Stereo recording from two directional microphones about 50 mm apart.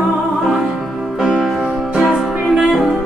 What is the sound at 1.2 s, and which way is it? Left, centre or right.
Music, centre.